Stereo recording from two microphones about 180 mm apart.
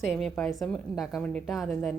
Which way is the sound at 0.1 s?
Centre (ahead or behind).